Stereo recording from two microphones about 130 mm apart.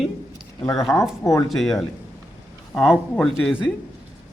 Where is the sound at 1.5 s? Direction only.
Centre (ahead or behind).